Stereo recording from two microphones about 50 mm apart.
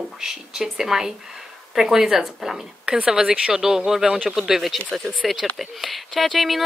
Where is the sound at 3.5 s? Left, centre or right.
Centre.